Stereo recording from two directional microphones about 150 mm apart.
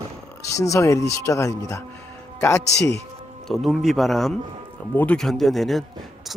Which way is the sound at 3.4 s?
Centre (ahead or behind).